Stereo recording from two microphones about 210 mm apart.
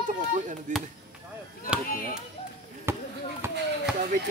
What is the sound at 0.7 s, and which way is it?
Speech, 35° right (ahead or behind).